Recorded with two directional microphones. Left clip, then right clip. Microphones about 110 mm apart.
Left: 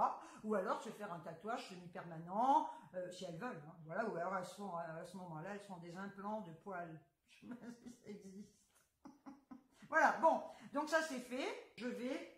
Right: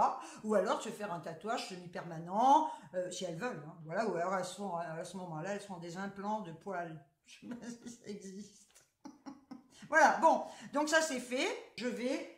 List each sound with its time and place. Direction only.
0.0 s speech: 15° right (ahead or behind)
9.8 s speech: 15° right (ahead or behind)